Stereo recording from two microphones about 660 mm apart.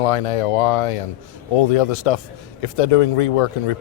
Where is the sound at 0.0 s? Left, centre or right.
Left.